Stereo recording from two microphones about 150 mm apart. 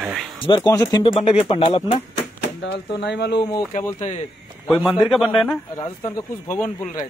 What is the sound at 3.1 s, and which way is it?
Speech, 90° left.